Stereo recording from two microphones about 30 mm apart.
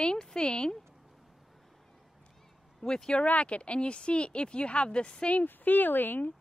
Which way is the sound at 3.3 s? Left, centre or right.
Left.